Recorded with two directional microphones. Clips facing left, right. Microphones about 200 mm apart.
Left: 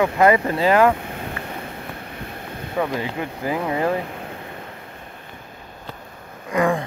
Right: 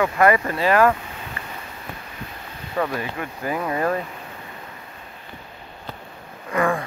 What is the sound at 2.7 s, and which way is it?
Speech, 15° left (ahead or behind).